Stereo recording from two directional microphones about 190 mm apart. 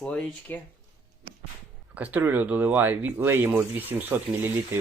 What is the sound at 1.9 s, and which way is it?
Speech, 10° right (ahead or behind).